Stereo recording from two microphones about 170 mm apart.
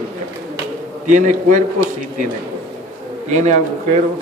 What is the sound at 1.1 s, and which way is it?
Speech, 50° right (ahead or behind).